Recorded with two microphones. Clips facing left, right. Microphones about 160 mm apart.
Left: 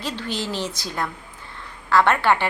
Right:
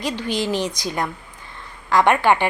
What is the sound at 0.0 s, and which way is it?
A woman's voice, 15° right (ahead or behind).